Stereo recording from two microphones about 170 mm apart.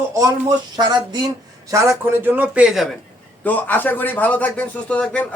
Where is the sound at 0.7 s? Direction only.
25° right (ahead or behind).